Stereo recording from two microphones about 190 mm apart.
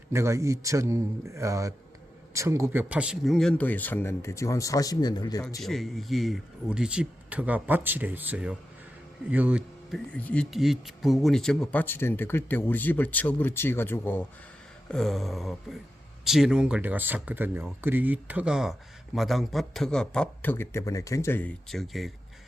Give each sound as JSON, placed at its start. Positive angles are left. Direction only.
{"t": 0.1, "sound": "a man's voice", "side_deg": -15}
{"t": 5.6, "sound": "a man's voice", "side_deg": 0}
{"t": 10.1, "sound": "speech", "side_deg": 5}